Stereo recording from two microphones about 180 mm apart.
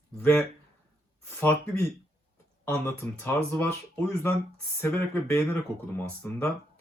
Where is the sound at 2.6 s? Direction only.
10° left (ahead or behind).